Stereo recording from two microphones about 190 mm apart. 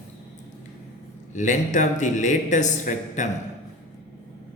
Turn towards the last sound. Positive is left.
turn(degrees=40)  # may be behind; listen again after turning